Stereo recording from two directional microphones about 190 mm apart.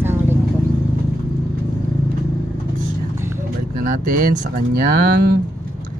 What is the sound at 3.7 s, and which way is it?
Speech, 50° right (ahead or behind).